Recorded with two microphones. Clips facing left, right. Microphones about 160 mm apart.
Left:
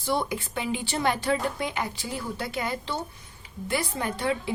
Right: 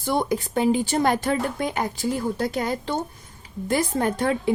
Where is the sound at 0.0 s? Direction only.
50° right (ahead or behind).